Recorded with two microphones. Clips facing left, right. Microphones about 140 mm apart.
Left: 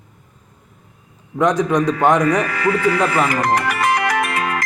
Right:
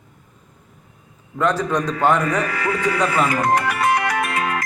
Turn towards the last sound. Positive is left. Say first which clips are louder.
# left 2 dB
turn(degrees=85)